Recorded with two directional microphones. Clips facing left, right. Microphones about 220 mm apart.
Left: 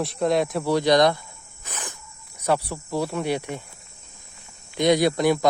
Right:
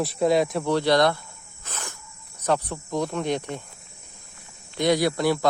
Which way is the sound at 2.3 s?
10° left (ahead or behind).